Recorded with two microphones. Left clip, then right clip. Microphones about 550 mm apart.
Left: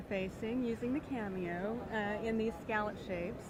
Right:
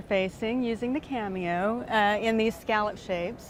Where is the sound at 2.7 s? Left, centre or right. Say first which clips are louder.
Right 10 dB; right.